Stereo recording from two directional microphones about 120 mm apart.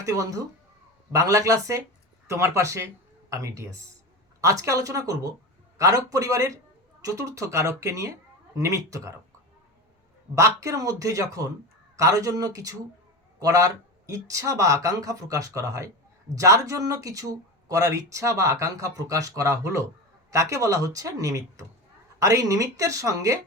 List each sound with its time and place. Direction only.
0.0 s speech: 30° right (ahead or behind)
10.3 s speech: 25° right (ahead or behind)